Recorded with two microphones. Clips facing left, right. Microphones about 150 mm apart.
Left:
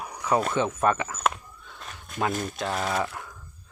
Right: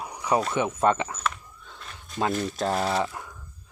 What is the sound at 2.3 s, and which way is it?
Speech, 50° left (ahead or behind).